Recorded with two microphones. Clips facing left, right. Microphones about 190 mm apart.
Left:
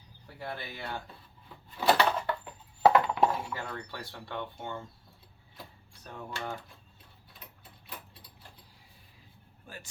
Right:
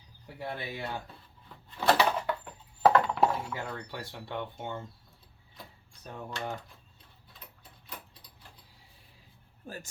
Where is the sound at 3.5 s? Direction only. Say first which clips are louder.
Right 1 dB; 10° right (ahead or behind).